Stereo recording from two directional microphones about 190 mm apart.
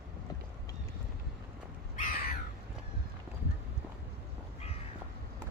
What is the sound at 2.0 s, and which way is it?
Crow, 45° left (ahead or behind).